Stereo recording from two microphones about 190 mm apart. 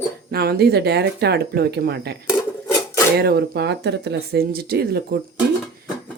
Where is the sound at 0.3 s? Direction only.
55° right (ahead or behind).